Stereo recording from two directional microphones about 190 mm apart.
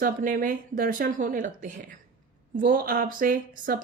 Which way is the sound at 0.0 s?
50° right (ahead or behind).